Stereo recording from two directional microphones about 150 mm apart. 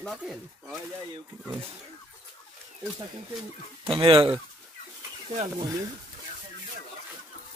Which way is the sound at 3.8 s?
35° right (ahead or behind).